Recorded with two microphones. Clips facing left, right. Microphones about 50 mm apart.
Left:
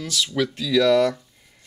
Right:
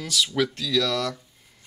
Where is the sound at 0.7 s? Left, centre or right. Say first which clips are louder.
Left 7 dB; centre.